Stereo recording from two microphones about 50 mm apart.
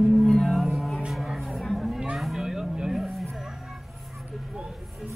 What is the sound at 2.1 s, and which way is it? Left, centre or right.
Vehicle, centre.